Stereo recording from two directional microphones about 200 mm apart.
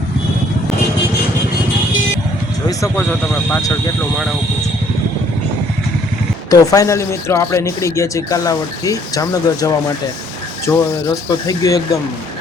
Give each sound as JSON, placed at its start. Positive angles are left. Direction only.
{"t": 2.6, "sound": "speech", "side_deg": 10}
{"t": 6.5, "sound": "speech", "side_deg": 15}